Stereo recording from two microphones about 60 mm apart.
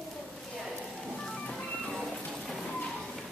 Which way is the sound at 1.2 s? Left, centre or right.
Centre.